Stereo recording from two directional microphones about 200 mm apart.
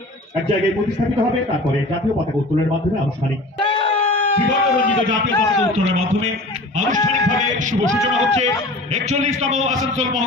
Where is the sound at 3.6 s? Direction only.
25° left (ahead or behind).